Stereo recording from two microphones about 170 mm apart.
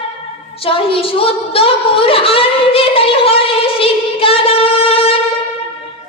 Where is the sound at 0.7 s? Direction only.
35° left (ahead or behind).